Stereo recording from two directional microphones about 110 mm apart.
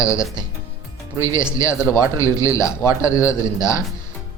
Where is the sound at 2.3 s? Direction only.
30° left (ahead or behind).